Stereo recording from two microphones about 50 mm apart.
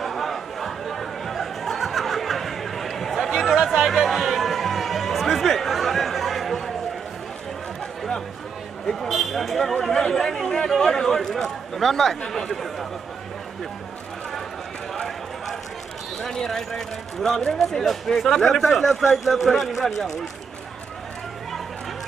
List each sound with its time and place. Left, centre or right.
0.0 s chatter: centre
8.8 s a man's voice: centre
16.2 s speech: centre